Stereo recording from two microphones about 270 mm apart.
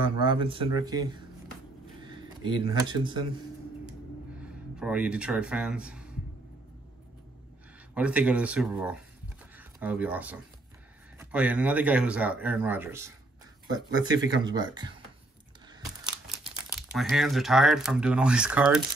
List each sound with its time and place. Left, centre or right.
0.0 s speech: centre
4.7 s speech: centre
7.9 s speech: centre
16.9 s speech: centre